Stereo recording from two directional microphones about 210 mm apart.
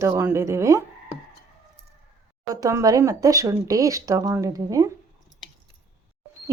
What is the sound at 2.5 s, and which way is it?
Speech, 15° right (ahead or behind).